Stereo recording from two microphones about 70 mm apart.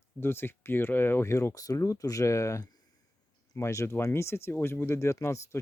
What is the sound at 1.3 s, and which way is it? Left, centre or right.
Speech, left.